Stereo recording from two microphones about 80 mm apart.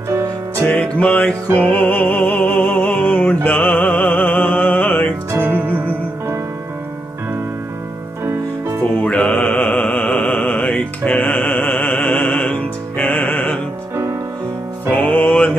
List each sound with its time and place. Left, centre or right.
0.6 s music: left
5.3 s music: right
9.0 s mantra: centre
14.9 s music: centre